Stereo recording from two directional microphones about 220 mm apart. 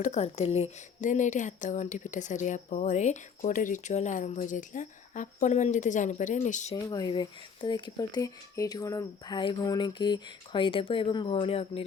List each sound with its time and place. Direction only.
0.0 s speech: 30° left (ahead or behind)
6.9 s speech: 20° left (ahead or behind)